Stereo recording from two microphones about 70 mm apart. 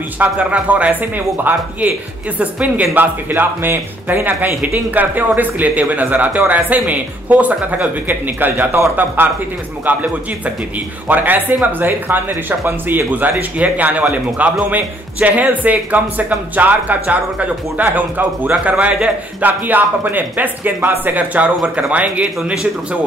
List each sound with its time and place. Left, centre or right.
0.2 s speech: right
11.1 s speech: right; by 22.7 s centre